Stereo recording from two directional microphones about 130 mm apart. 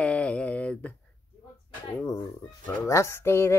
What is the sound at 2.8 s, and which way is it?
Speech, 20° left (ahead or behind).